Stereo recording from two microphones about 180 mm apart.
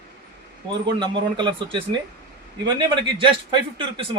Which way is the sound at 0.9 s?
25° right (ahead or behind).